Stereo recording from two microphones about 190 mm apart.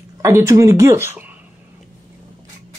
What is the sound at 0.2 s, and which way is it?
Speech, 15° right (ahead or behind).